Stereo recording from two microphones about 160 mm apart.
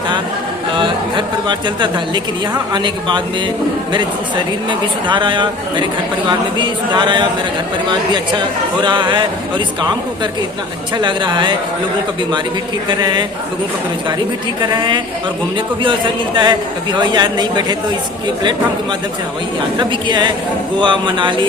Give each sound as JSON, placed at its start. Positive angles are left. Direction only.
{"t": 0.7, "sound": "speech", "side_deg": -30}
{"t": 4.7, "sound": "speech", "side_deg": -30}
{"t": 10.9, "sound": "speech", "side_deg": -30}
{"t": 12.9, "sound": "speech", "side_deg": -30}
{"t": 14.8, "sound": "speech", "side_deg": -30}
{"t": 19.8, "sound": "speech", "side_deg": -30}